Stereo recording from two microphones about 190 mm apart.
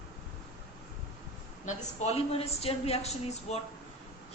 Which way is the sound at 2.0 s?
35° left (ahead or behind).